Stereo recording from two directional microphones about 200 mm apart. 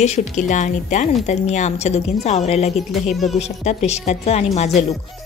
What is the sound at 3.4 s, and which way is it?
Speech, 35° left (ahead or behind).